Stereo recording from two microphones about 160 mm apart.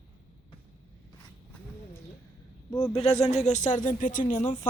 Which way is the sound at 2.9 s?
40° left (ahead or behind).